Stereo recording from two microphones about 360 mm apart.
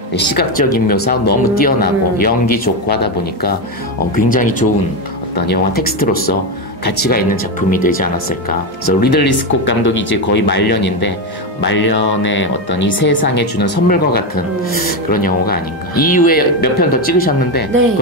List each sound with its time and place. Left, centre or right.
0.1 s speech: left